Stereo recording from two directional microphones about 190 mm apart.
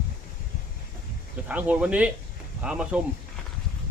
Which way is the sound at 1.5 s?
5° right (ahead or behind).